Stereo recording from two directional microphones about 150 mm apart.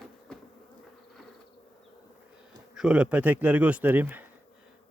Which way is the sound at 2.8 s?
5° right (ahead or behind).